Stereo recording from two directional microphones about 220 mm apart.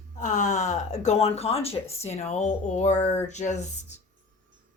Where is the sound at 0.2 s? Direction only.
35° left (ahead or behind).